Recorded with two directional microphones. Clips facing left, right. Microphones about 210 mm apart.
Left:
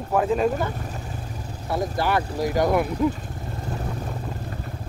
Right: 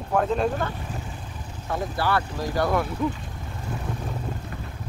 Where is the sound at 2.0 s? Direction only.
15° left (ahead or behind).